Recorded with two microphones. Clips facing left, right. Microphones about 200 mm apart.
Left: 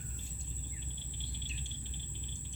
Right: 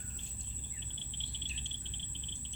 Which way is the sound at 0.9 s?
25° right (ahead or behind).